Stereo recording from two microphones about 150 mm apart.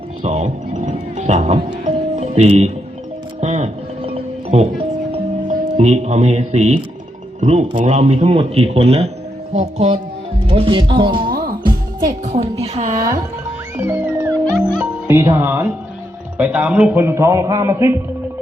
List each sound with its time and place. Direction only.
0.2 s music: 50° right (ahead or behind)
5.5 s speech: 50° right (ahead or behind); by 11.2 s 30° right (ahead or behind)
11.3 s music: 80° right
11.6 s music: 25° right (ahead or behind)
12.2 s speech: 45° right (ahead or behind)
13.7 s music: 15° right (ahead or behind)
16.4 s speech: 10° right (ahead or behind)